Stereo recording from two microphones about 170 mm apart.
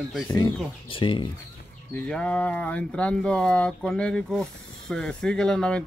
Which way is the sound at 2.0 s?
5° left (ahead or behind).